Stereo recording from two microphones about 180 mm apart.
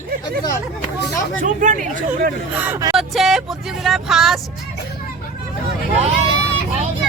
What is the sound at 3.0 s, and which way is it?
Speech, centre (ahead or behind).